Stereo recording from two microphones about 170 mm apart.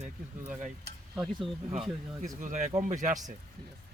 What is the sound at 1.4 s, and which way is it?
Speech, centre (ahead or behind).